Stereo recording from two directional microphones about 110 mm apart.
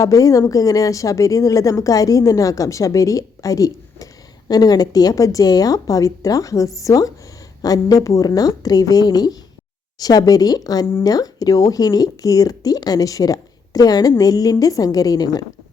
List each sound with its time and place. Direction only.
0.0 s a woman's voice: 30° left (ahead or behind)